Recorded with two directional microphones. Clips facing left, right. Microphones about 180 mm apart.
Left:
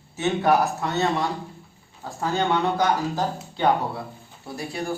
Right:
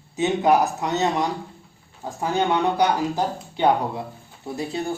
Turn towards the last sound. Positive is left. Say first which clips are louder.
# right 3 dB
turn(degrees=-25)  # may be behind; listen again after turning